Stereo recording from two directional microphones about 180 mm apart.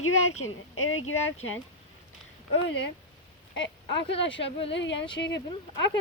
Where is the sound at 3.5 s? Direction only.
90° left.